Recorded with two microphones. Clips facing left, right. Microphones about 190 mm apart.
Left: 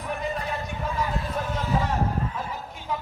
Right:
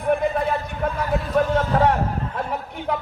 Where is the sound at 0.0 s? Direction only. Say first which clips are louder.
Right 9 dB; 55° right (ahead or behind).